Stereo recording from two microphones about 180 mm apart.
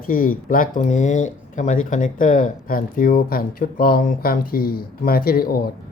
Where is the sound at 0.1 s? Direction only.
55° left (ahead or behind).